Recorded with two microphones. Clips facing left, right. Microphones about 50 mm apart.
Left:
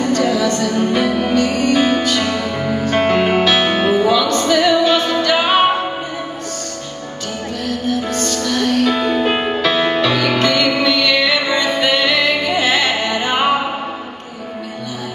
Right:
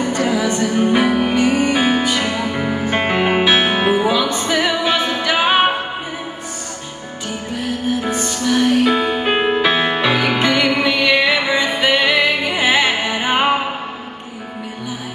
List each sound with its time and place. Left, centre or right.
0.0 s music: centre
7.5 s music: centre